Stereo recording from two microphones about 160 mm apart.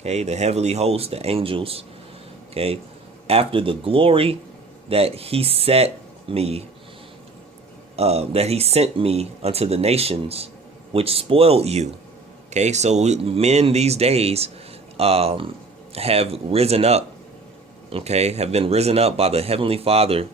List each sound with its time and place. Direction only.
0.0 s speech: 40° right (ahead or behind)
7.9 s speech: 40° right (ahead or behind)